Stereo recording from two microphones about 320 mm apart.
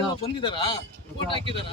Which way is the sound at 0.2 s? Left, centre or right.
Centre.